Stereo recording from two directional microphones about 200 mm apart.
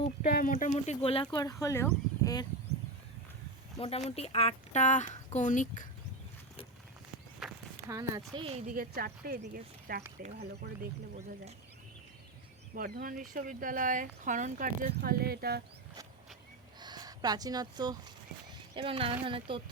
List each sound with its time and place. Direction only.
0.2 s speech: 40° left (ahead or behind); by 2.5 s 20° left (ahead or behind)
3.8 s speech: 30° left (ahead or behind)
7.4 s walk: centre (ahead or behind)
7.9 s speech: 15° right (ahead or behind)
8.4 s a woman's voice: 30° right (ahead or behind)
8.7 s speech: 45° right (ahead or behind)
12.7 s speech: 50° right (ahead or behind)
16.8 s speech: 20° right (ahead or behind)